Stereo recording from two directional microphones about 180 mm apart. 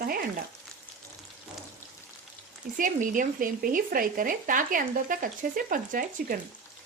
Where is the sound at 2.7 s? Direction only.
45° right (ahead or behind).